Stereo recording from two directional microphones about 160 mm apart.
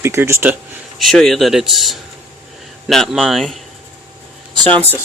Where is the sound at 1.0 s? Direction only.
Centre (ahead or behind).